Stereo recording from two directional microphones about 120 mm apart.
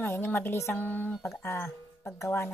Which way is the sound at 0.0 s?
20° left (ahead or behind).